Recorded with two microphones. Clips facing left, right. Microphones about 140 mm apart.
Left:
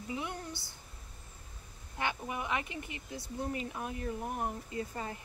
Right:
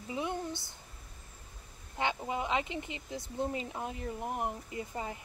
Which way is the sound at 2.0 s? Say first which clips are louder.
Right 3 dB; 20° right (ahead or behind).